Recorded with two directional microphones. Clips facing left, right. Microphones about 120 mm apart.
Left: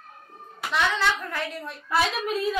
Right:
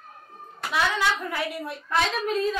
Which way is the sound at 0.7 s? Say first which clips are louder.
Even; 10° right (ahead or behind).